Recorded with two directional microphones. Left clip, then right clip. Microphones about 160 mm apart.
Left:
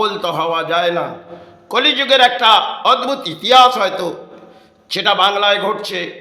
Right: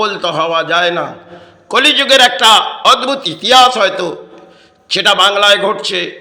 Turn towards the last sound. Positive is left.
turn(degrees=-15)  # may be behind; listen again after turning